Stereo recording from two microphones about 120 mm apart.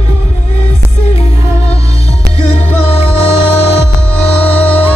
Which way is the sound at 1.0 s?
60° left (ahead or behind).